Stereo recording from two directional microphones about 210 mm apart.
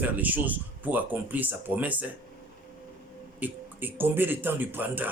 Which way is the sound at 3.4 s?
10° right (ahead or behind).